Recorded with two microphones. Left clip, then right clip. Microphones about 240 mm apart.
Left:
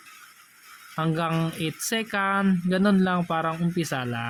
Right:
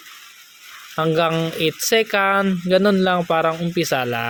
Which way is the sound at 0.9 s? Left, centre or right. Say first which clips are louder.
Right 9 dB; centre.